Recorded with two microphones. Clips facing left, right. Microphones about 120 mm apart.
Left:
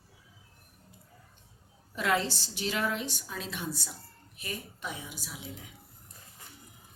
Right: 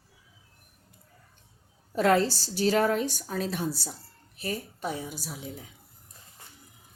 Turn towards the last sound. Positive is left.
turn(degrees=-40)  # may be behind; listen again after turning